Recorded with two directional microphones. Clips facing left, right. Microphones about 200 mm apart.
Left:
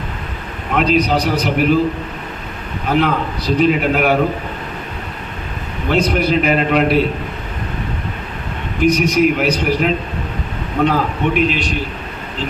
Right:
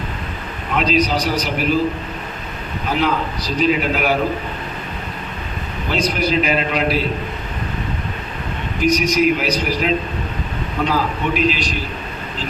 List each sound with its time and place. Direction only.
0.8 s a man's voice: 60° left (ahead or behind)
2.9 s a man's voice: 55° left (ahead or behind)
5.9 s a man's voice: 60° left (ahead or behind)
8.8 s a man's voice: 60° left (ahead or behind)